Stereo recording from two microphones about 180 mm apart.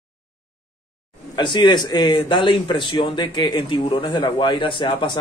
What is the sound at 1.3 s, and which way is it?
Speech, 25° left (ahead or behind).